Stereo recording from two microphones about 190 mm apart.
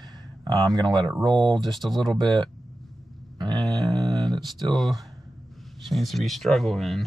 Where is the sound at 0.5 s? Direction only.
20° right (ahead or behind).